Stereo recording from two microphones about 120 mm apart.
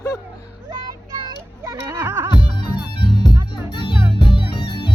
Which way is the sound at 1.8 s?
20° right (ahead or behind).